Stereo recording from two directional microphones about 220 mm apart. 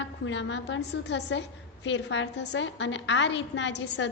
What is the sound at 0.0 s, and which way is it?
A woman's voice, 55° left (ahead or behind).